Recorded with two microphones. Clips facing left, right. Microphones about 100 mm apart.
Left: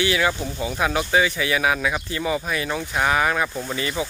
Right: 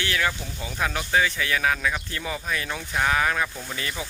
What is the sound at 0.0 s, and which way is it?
Speech, 10° left (ahead or behind).